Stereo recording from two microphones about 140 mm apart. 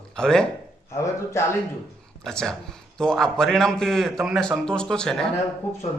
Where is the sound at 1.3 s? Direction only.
20° left (ahead or behind).